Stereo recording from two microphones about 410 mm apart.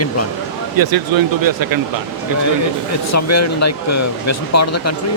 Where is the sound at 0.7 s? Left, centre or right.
Right.